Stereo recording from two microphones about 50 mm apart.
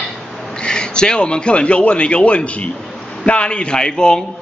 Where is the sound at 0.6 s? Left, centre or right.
Centre.